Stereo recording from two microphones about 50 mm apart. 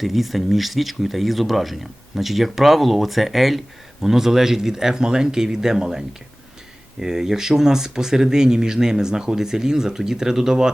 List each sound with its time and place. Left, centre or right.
0.0 s speech: centre